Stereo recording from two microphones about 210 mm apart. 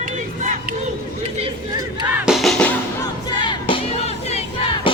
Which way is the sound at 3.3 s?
20° left (ahead or behind).